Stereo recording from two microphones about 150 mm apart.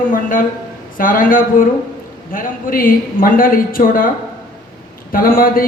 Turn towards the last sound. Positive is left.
turn(degrees=75)  # may be behind; listen again after turning